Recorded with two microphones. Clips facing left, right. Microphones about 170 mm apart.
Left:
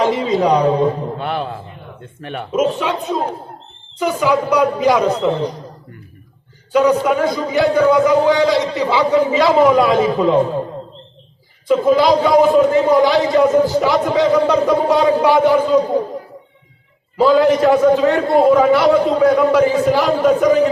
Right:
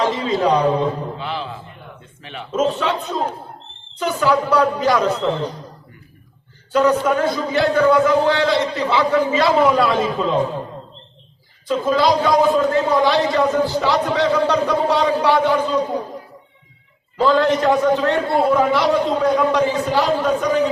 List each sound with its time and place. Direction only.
0.0 s a man's voice: 15° left (ahead or behind)
1.1 s a sound: 55° left (ahead or behind)
2.2 s speech: 55° left (ahead or behind)
2.5 s a man's voice: 10° left (ahead or behind)
6.7 s a man's voice: 15° left (ahead or behind)
11.7 s a man's voice: 10° left (ahead or behind)
17.2 s a man's voice: 10° left (ahead or behind)